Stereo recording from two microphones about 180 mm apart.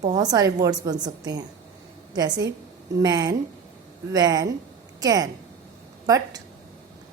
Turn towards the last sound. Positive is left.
turn(degrees=-20)  # may be behind; listen again after turning